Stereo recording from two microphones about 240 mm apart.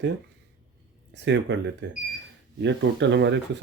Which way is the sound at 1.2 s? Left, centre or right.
Right.